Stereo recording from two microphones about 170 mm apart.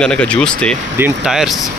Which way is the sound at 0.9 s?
10° right (ahead or behind).